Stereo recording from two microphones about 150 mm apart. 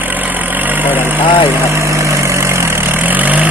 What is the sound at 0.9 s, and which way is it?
Speech, 10° right (ahead or behind).